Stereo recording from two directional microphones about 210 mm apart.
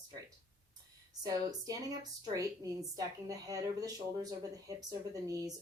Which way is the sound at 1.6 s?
15° right (ahead or behind).